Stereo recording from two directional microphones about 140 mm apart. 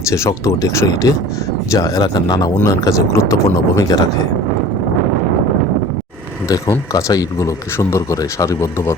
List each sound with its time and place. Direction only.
0.1 s speech: 20° left (ahead or behind)
6.9 s speech: 25° left (ahead or behind)